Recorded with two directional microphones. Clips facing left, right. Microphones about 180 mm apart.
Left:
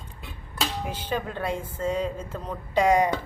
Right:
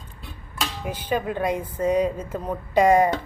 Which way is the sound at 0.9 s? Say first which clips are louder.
Right 4 dB; 10° right (ahead or behind).